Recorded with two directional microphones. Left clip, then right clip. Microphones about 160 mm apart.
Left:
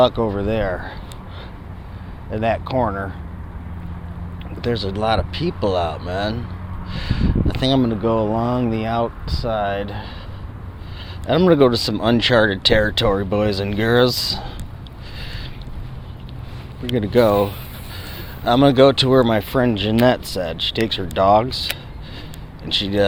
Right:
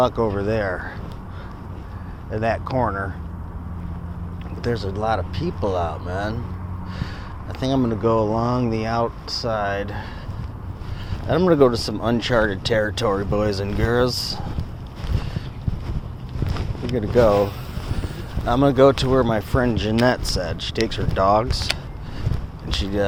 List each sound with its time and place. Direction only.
0.0 s speech: 65° left (ahead or behind)
2.3 s speech: 80° left
4.6 s speech: 90° left
7.9 s speech: 60° left (ahead or behind)
11.3 s speech: 90° left
17.0 s speech: 90° left
18.6 s speech: 90° left; by 21.7 s 70° left (ahead or behind)
22.7 s speech: 90° left